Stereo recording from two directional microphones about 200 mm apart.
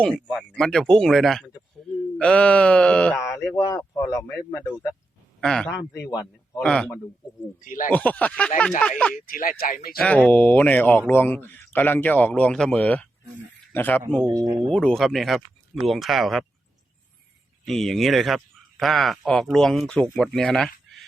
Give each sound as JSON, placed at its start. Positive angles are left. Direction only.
{"t": 0.0, "sound": "speech", "side_deg": 0}
{"t": 5.4, "sound": "a man's voice", "side_deg": 5}
{"t": 5.9, "sound": "a man's voice", "side_deg": 20}
{"t": 6.6, "sound": "speech", "side_deg": 5}
{"t": 7.6, "sound": "speech", "side_deg": 40}
{"t": 7.9, "sound": "speech", "side_deg": 5}
{"t": 9.1, "sound": "speech", "side_deg": 45}
{"t": 10.0, "sound": "speech", "side_deg": 5}
{"t": 14.3, "sound": "speech", "side_deg": -20}
{"t": 14.7, "sound": "speech", "side_deg": 5}
{"t": 17.7, "sound": "speech", "side_deg": 0}